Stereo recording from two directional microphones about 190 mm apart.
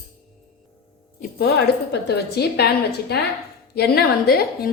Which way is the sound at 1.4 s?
60° left (ahead or behind).